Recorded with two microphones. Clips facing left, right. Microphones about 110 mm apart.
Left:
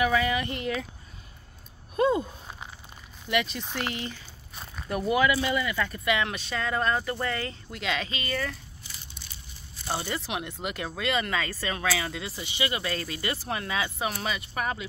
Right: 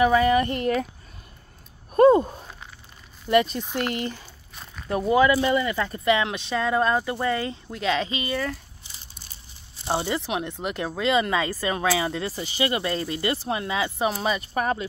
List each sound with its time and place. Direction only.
0.0 s speech: 35° right (ahead or behind)
2.0 s speech: 50° right (ahead or behind)
3.3 s speech: 40° right (ahead or behind)
4.8 s speech: 25° right (ahead or behind)
9.8 s speech: 25° right (ahead or behind)
12.2 s speech: 40° right (ahead or behind); by 14.0 s 25° right (ahead or behind)
14.2 s speech: 35° right (ahead or behind)